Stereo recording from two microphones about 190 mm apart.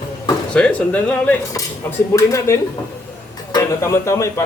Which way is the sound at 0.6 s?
5° left (ahead or behind).